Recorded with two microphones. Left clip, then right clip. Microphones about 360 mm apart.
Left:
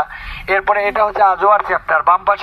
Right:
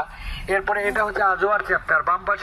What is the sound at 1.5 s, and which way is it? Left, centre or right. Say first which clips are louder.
Speech: left 7 dB; left.